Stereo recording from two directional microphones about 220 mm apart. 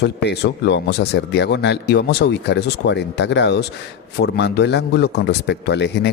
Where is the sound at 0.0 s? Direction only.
50° left (ahead or behind).